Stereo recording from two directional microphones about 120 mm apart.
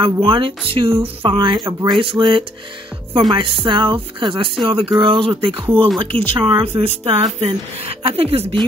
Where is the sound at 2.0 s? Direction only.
45° right (ahead or behind).